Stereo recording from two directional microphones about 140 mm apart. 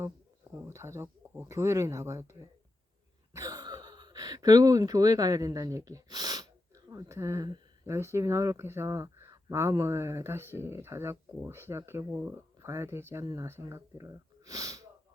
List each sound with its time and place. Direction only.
0.6 s speech: 20° right (ahead or behind)
3.3 s speech: 25° right (ahead or behind)